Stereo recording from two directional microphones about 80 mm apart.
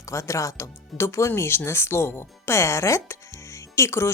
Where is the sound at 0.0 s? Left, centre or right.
Left.